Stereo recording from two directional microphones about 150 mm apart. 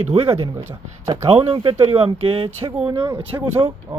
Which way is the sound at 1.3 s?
40° right (ahead or behind).